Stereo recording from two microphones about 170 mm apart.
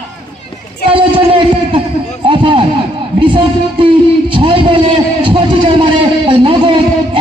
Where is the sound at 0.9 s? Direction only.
30° right (ahead or behind).